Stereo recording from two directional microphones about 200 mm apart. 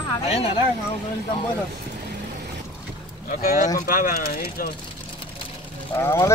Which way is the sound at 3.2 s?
45° left (ahead or behind).